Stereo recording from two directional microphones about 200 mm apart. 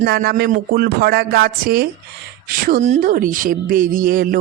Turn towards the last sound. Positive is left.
turn(degrees=-45)  # may be behind; listen again after turning